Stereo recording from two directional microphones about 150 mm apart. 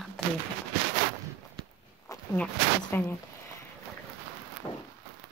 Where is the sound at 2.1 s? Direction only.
20° left (ahead or behind).